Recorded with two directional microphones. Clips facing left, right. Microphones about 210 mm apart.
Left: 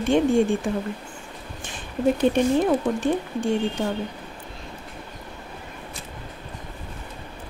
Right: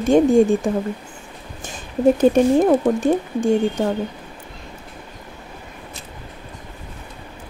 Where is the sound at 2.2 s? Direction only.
40° right (ahead or behind).